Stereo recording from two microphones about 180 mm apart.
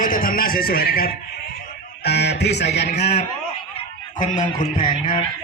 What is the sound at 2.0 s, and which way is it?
Music, 65° left (ahead or behind).